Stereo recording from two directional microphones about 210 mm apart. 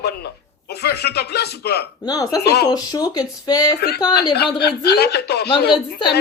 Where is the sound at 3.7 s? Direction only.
50° left (ahead or behind).